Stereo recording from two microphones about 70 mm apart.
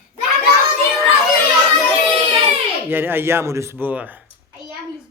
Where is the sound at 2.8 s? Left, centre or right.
Right.